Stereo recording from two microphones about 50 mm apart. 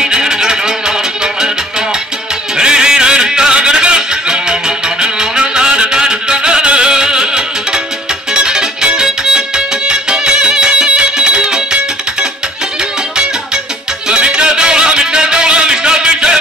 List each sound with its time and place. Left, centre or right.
0.0 s music: centre
2.5 s music: centre
14.0 s music: centre